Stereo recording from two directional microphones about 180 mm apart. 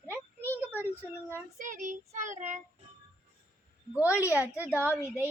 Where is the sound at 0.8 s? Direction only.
10° right (ahead or behind).